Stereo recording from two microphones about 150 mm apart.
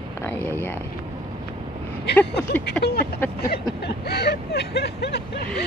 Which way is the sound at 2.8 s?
10° left (ahead or behind).